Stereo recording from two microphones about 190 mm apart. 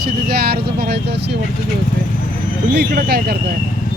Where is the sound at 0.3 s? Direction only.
55° right (ahead or behind).